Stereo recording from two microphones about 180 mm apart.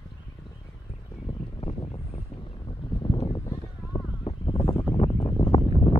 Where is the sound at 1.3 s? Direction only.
30° left (ahead or behind).